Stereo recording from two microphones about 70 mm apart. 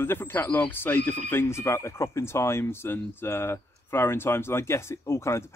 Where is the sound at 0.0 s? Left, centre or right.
Left.